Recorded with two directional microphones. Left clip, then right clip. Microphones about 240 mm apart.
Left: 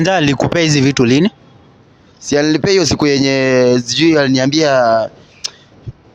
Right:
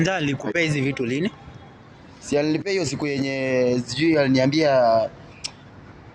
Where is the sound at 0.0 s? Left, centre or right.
Left.